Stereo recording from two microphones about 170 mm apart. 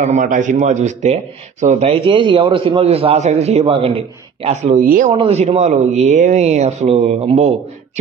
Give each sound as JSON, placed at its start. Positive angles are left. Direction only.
{"t": 0.0, "sound": "a man's voice", "side_deg": -45}
{"t": 4.8, "sound": "speech", "side_deg": -55}
{"t": 5.1, "sound": "a man's voice", "side_deg": -35}